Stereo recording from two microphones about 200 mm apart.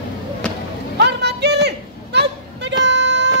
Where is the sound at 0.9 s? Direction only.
55° right (ahead or behind).